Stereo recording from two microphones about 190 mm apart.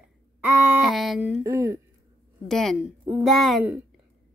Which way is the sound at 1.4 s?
15° right (ahead or behind).